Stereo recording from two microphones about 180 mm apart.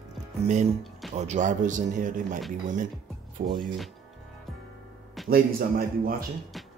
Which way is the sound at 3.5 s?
Centre (ahead or behind).